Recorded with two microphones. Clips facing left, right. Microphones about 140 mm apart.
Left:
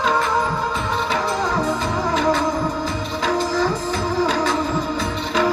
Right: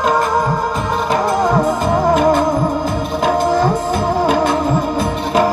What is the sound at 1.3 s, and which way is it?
Music, 50° right (ahead or behind).